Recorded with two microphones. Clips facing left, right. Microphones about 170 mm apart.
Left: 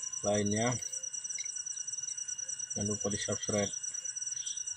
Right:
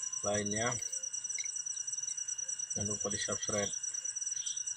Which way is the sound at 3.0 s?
20° left (ahead or behind).